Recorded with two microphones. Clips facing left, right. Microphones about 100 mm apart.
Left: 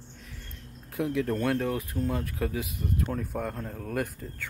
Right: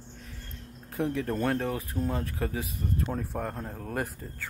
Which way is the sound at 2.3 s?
Centre (ahead or behind).